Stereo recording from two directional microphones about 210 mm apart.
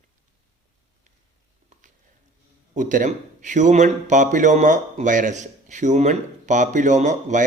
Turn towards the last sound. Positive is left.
turn(degrees=-35)  # may be behind; listen again after turning